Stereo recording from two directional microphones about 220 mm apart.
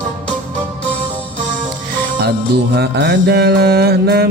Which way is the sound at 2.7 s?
50° right (ahead or behind).